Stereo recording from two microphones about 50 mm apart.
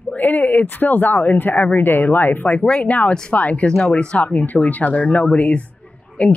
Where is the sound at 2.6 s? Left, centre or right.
Left.